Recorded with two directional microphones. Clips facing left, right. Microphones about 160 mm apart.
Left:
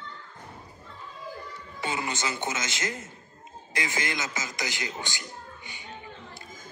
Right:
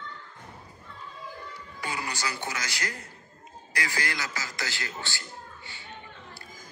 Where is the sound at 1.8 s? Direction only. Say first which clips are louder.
Left 3 dB; 20° left (ahead or behind).